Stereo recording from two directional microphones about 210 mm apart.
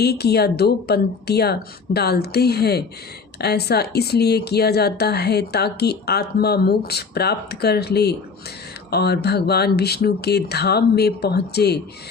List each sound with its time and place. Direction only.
0.0 s speech: 50° left (ahead or behind)